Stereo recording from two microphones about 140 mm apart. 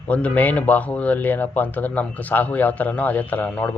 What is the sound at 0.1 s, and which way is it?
Speech, 10° left (ahead or behind).